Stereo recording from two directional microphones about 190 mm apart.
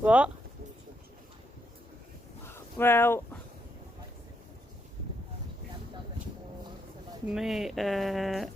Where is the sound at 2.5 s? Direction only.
10° left (ahead or behind).